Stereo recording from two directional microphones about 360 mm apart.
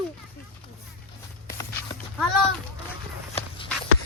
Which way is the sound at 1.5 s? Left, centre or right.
Centre.